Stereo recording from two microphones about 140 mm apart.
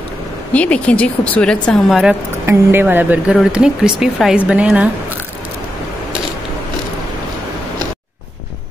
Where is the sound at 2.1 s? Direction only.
15° right (ahead or behind).